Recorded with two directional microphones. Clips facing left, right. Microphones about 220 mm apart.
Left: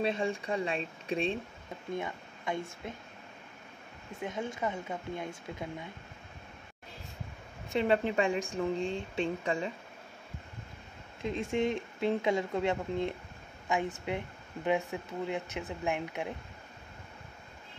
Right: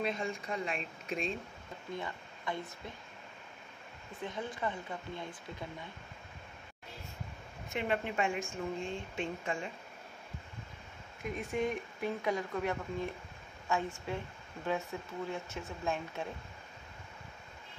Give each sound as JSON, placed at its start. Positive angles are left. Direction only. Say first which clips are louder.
{"t": 0.0, "sound": "speech", "louder": "left 5 dB", "side_deg": 30}
{"t": 4.3, "sound": "speech", "louder": "left 3 dB", "side_deg": 20}
{"t": 7.7, "sound": "speech", "louder": "left 6 dB", "side_deg": 30}
{"t": 11.2, "sound": "speech", "louder": "left 4 dB", "side_deg": 25}